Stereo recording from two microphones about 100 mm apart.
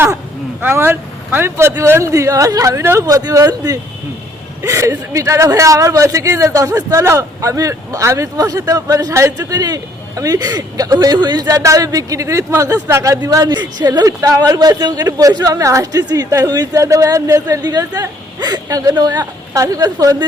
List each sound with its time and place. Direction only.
0.6 s speech: 20° right (ahead or behind)
3.1 s speech: 40° right (ahead or behind)